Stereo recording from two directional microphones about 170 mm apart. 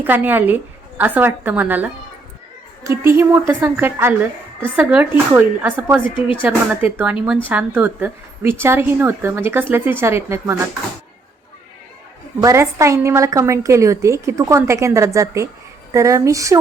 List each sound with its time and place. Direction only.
0.0 s a woman's voice: 10° right (ahead or behind)
6.1 s speech: 30° left (ahead or behind)
6.4 s a woman's voice: 10° right (ahead or behind)
12.4 s a woman's voice: 15° right (ahead or behind)